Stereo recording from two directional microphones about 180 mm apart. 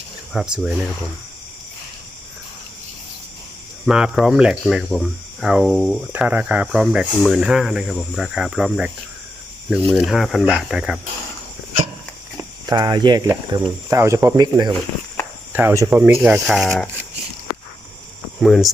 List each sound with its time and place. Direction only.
0.3 s speech: 5° right (ahead or behind)
3.8 s speech: 5° right (ahead or behind)
12.6 s speech: 20° right (ahead or behind); by 16.6 s 5° right (ahead or behind)
16.6 s speech: 10° left (ahead or behind)
18.3 s speech: centre (ahead or behind)